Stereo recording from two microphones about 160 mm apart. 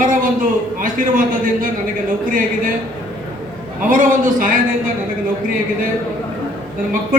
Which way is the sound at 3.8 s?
55° right (ahead or behind).